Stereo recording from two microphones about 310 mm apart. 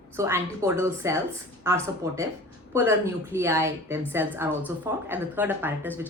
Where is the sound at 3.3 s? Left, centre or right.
Centre.